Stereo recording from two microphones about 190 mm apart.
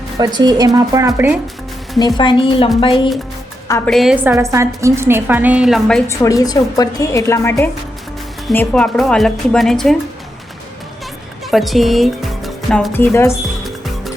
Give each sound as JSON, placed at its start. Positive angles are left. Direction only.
{"t": 0.3, "sound": "a woman's voice", "side_deg": -20}
{"t": 2.0, "sound": "a woman's voice", "side_deg": 20}
{"t": 3.8, "sound": "a woman's voice", "side_deg": 0}
{"t": 6.1, "sound": "a woman's voice", "side_deg": 20}
{"t": 8.5, "sound": "a woman's voice", "side_deg": 5}
{"t": 11.5, "sound": "speech", "side_deg": 0}
{"t": 12.9, "sound": "a woman's voice", "side_deg": 10}
{"t": 13.7, "sound": "music", "side_deg": 0}